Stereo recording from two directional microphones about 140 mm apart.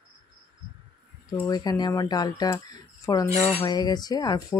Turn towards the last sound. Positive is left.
turn(degrees=25)  # may be behind; listen again after turning